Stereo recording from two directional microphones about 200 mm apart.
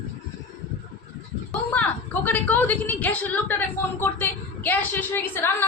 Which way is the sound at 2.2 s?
10° left (ahead or behind).